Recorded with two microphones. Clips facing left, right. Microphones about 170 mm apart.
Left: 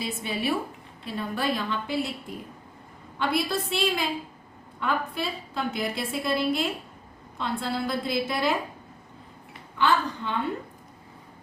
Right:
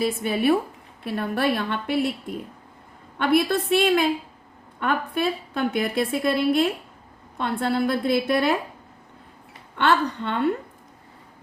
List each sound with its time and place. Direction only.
0.0 s a woman's voice: 55° right (ahead or behind)
3.2 s a woman's voice: 55° right (ahead or behind)
9.7 s a woman's voice: 65° right (ahead or behind)